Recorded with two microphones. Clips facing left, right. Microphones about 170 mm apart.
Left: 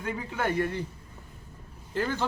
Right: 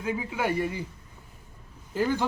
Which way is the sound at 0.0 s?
5° right (ahead or behind).